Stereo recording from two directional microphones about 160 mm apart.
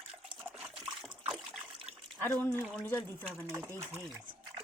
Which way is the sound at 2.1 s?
15° left (ahead or behind).